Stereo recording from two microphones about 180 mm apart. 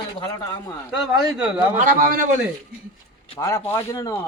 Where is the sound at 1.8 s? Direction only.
50° right (ahead or behind).